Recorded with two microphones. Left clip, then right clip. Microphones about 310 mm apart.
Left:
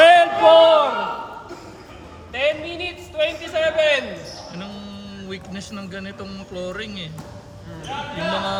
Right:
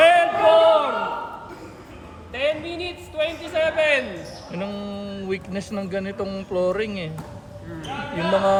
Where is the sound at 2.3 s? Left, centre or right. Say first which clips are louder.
Left 2 dB; left.